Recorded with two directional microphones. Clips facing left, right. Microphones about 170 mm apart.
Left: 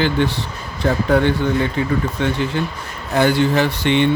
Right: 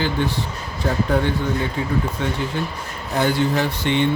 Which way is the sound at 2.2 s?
75° left (ahead or behind).